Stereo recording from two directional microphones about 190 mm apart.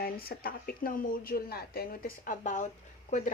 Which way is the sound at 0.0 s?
50° left (ahead or behind).